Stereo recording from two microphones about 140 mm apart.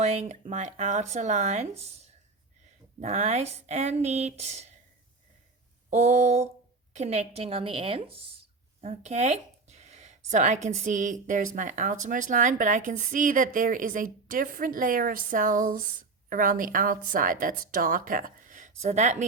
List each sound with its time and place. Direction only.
0.0 s speech: 55° right (ahead or behind)
3.0 s speech: 55° right (ahead or behind)
5.9 s a woman's voice: 55° right (ahead or behind)